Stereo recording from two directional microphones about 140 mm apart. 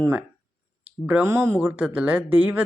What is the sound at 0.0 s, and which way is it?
Speech, 10° right (ahead or behind).